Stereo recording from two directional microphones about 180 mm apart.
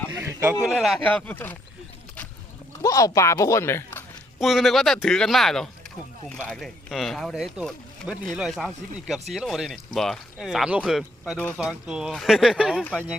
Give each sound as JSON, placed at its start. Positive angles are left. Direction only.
{"t": 0.1, "sound": "a sound", "side_deg": -15}
{"t": 0.6, "sound": "speech", "side_deg": 0}
{"t": 2.8, "sound": "speech", "side_deg": 20}
{"t": 4.4, "sound": "speech", "side_deg": 0}